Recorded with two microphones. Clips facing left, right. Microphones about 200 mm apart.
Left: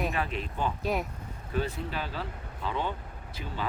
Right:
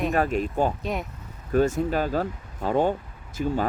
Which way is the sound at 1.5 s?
45° right (ahead or behind).